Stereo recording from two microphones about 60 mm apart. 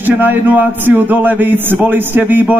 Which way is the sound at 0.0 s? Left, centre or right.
Right.